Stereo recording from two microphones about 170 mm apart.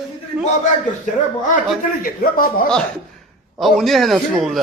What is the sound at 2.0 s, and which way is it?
Speech, 55° left (ahead or behind).